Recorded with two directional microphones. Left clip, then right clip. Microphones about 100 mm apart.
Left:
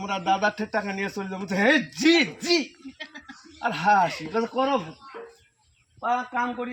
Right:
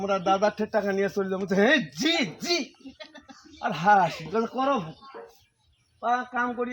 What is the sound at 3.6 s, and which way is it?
Speech, 40° right (ahead or behind).